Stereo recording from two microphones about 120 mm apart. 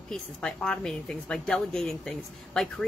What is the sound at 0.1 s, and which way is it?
A woman's voice, 5° left (ahead or behind).